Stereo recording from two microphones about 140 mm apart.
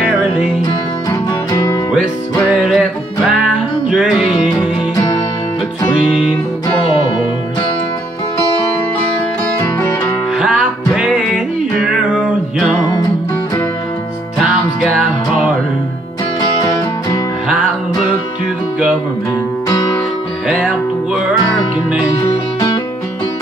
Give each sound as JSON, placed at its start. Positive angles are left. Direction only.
{"t": 1.1, "sound": "music", "side_deg": 25}
{"t": 2.3, "sound": "music", "side_deg": 0}
{"t": 10.3, "sound": "music", "side_deg": -5}
{"t": 14.8, "sound": "music", "side_deg": 0}
{"t": 16.3, "sound": "music", "side_deg": 30}
{"t": 20.4, "sound": "music", "side_deg": -5}